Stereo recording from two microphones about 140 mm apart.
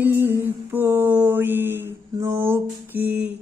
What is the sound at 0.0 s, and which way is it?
Mantra, 15° right (ahead or behind).